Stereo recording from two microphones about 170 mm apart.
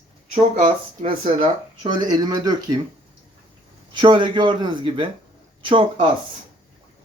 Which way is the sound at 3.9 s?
30° right (ahead or behind).